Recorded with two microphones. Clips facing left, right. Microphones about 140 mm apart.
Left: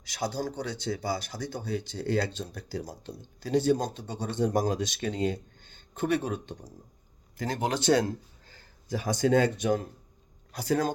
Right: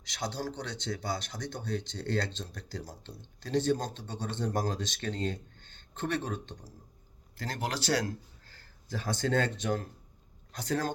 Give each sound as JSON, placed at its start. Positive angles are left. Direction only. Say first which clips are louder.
{"t": 0.0, "sound": "speech", "louder": "left 4 dB", "side_deg": 10}